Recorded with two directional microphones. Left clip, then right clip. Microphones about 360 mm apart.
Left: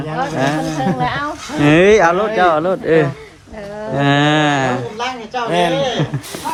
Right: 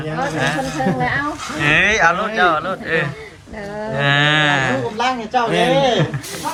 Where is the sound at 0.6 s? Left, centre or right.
Centre.